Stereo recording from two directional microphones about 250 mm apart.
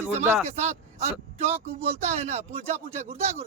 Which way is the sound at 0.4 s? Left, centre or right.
Right.